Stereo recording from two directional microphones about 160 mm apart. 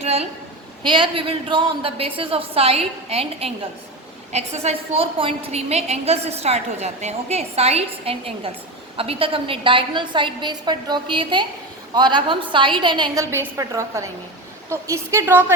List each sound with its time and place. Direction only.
0.0 s a sound: 40° right (ahead or behind)
0.8 s a woman's voice: 30° right (ahead or behind)
13.3 s a woman's voice: 15° right (ahead or behind)